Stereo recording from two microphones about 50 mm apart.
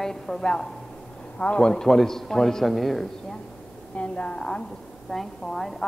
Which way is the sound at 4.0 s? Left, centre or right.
Left.